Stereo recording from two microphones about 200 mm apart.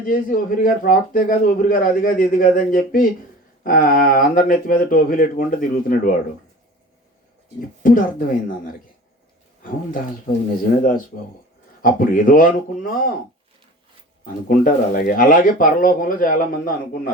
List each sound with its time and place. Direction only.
0.0 s a man's voice: 45° left (ahead or behind)
7.8 s a man's voice: 45° left (ahead or behind)
14.4 s a man's voice: 45° left (ahead or behind)